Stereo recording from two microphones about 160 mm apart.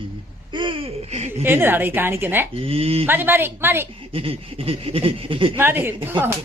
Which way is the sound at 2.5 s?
35° right (ahead or behind).